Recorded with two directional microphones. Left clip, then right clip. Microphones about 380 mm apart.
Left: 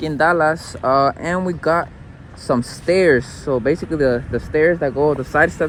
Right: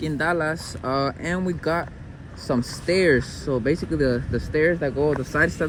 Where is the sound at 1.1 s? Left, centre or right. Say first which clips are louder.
Left 6 dB; left.